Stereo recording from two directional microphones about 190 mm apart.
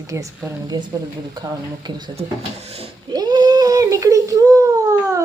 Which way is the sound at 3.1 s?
20° right (ahead or behind).